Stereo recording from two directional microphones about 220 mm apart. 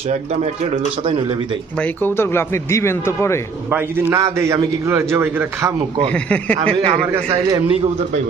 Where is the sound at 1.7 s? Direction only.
5° left (ahead or behind).